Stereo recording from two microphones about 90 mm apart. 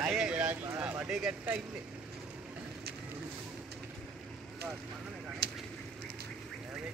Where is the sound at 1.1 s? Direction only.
5° right (ahead or behind).